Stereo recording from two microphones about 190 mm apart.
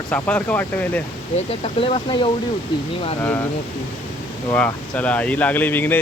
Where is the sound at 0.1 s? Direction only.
10° left (ahead or behind).